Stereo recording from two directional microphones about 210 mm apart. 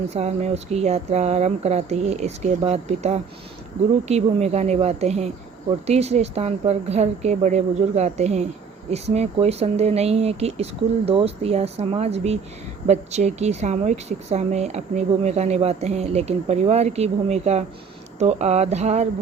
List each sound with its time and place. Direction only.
0.1 s a woman's voice: 30° right (ahead or behind)